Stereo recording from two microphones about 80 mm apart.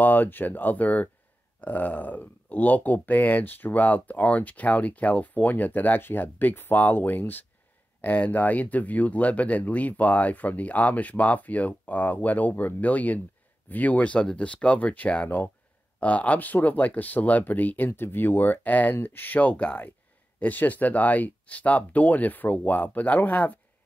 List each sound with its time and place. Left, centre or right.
0.0 s speech: left